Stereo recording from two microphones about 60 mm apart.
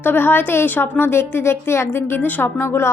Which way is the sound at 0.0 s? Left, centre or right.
Left.